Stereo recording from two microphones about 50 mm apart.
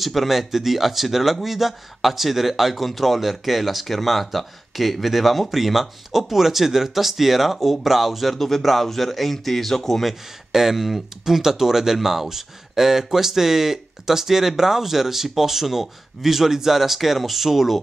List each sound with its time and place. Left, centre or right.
0.0 s speech: centre
10.5 s speech: centre